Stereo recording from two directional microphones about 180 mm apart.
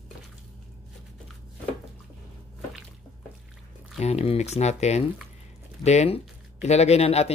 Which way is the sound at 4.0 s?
35° left (ahead or behind).